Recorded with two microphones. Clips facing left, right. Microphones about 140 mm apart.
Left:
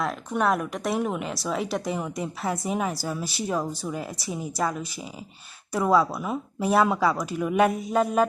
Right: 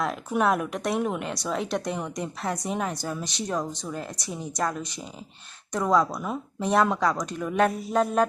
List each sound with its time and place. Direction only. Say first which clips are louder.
0.0 s speech: right 1 dB; centre (ahead or behind)